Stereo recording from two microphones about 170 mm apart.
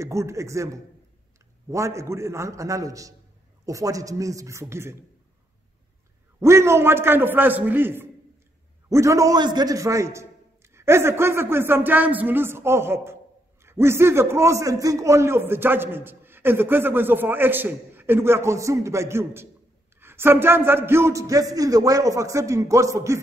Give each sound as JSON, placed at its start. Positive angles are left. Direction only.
{"t": 0.0, "sound": "a man's voice", "side_deg": -15}
{"t": 6.4, "sound": "a man's voice", "side_deg": -15}